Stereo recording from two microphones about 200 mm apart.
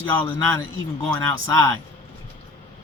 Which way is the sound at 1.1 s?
15° left (ahead or behind).